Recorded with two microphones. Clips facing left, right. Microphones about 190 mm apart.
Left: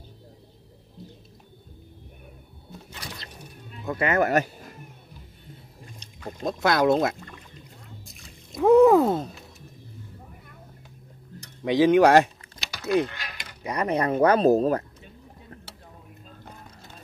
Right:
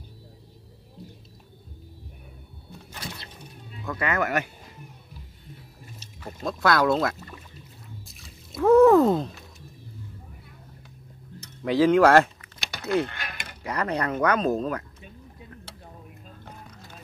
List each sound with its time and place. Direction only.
3.8 s speech: 25° left (ahead or behind)
5.9 s liquid: 5° right (ahead or behind)
6.4 s speech: 20° left (ahead or behind)
8.1 s a sound: centre (ahead or behind)
8.5 s speech: 15° left (ahead or behind)
11.6 s speech: 20° left (ahead or behind)
13.1 s mechanisms: 55° right (ahead or behind)
13.7 s speech: 20° left (ahead or behind); by 14.9 s 35° left (ahead or behind)